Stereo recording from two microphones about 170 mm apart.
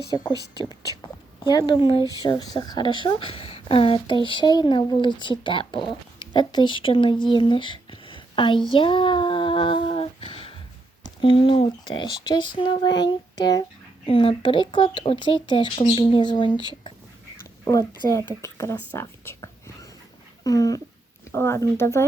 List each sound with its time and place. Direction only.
1.5 s speech: 25° left (ahead or behind)
8.7 s child singing: 30° left (ahead or behind)
11.0 s speech: 30° left (ahead or behind)
17.7 s speech: 20° left (ahead or behind)